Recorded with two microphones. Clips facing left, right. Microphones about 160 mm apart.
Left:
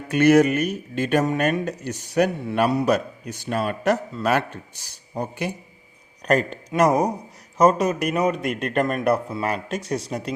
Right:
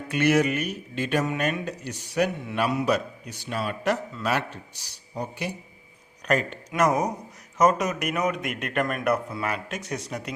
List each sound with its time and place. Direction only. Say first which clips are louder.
0.1 s speech: left 6 dB; 45° left (ahead or behind)
6.2 s a man's voice: left 4 dB; 35° left (ahead or behind)